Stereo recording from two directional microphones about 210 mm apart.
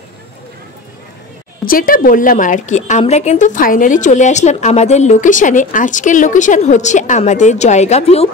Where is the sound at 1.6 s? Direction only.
45° left (ahead or behind).